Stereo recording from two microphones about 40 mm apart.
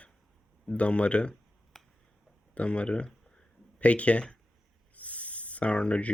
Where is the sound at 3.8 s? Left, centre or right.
Left.